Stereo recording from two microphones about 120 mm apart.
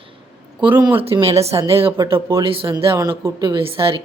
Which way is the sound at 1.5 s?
25° right (ahead or behind).